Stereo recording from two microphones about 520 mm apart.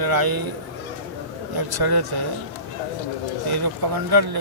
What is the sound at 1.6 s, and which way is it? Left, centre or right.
Speech, right.